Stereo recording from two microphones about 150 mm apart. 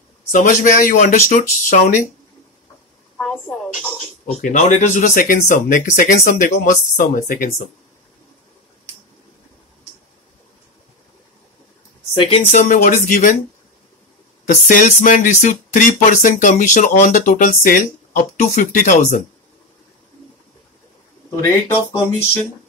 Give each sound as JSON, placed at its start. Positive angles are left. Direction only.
{"t": 0.3, "sound": "speech", "side_deg": 60}
{"t": 3.2, "sound": "a woman's voice", "side_deg": 5}
{"t": 4.4, "sound": "speech", "side_deg": 55}
{"t": 12.1, "sound": "speech", "side_deg": 35}
{"t": 12.4, "sound": "speech", "side_deg": 55}
{"t": 14.4, "sound": "speech", "side_deg": 60}